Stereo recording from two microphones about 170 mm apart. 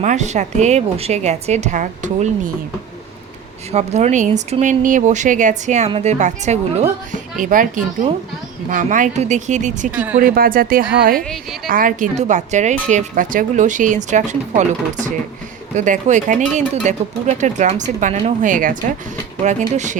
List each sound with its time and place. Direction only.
0.0 s a woman's voice: 45° right (ahead or behind)
3.7 s a woman's voice: 40° right (ahead or behind)
9.9 s speech: 10° right (ahead or behind)
10.3 s a woman's voice: 60° right (ahead or behind)
11.2 s a woman's voice: 5° left (ahead or behind)
11.7 s a woman's voice: 50° right (ahead or behind)